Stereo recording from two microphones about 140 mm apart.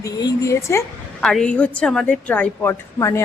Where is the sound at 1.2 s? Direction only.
5° left (ahead or behind).